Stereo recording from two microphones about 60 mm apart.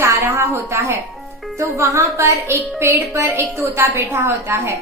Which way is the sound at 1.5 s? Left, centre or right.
Right.